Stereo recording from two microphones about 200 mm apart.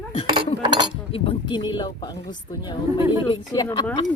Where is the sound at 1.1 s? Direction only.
25° left (ahead or behind).